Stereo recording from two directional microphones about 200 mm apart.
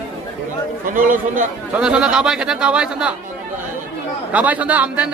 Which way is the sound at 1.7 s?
5° right (ahead or behind).